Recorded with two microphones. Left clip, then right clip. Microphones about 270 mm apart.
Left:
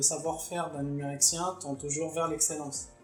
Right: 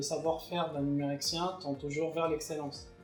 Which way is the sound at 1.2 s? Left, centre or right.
Left.